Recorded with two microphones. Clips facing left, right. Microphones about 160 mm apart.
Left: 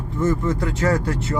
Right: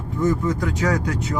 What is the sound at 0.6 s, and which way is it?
Speech, centre (ahead or behind).